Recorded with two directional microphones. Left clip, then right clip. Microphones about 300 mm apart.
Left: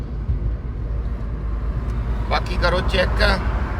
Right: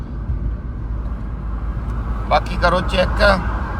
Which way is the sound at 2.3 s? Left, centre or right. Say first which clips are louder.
Right 5 dB; centre.